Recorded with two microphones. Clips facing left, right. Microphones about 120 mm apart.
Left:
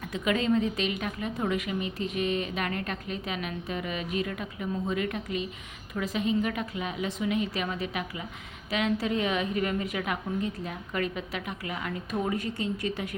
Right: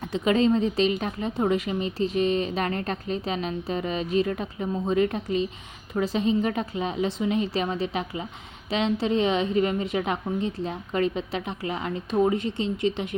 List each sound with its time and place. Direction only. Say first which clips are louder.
0.0 s a woman's voice: right 6 dB; 30° right (ahead or behind)